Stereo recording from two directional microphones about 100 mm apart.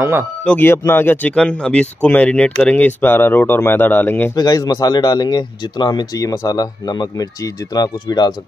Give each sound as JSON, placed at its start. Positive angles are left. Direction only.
{"t": 0.6, "sound": "speech", "side_deg": 25}
{"t": 2.7, "sound": "speech", "side_deg": 15}
{"t": 4.4, "sound": "speech", "side_deg": 40}
{"t": 6.1, "sound": "speech", "side_deg": 35}